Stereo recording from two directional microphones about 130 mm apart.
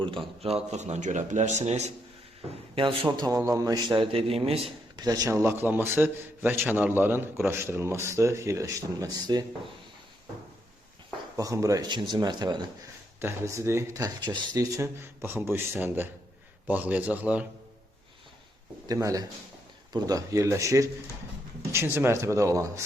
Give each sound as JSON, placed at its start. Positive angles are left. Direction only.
{"t": 0.4, "sound": "a man's voice", "side_deg": -55}
{"t": 2.7, "sound": "a man's voice", "side_deg": -45}
{"t": 4.9, "sound": "a man's voice", "side_deg": -30}
{"t": 11.3, "sound": "a man's voice", "side_deg": -25}
{"t": 13.1, "sound": "a man's voice", "side_deg": -20}
{"t": 18.9, "sound": "a man's voice", "side_deg": -25}